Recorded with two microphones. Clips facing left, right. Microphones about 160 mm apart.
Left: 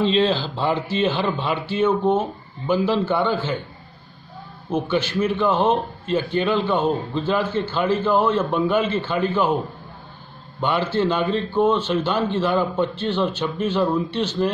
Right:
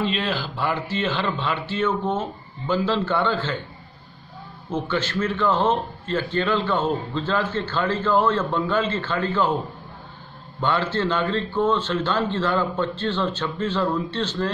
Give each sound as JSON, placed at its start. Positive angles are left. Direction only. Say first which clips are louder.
{"t": 0.2, "sound": "a man's voice", "louder": "left 6 dB", "side_deg": 25}
{"t": 4.6, "sound": "a man's voice", "louder": "left 3 dB", "side_deg": 15}
{"t": 10.6, "sound": "a man's voice", "louder": "left 2 dB", "side_deg": 15}